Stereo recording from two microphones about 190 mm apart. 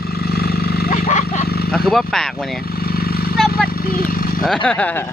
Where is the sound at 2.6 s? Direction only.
55° left (ahead or behind).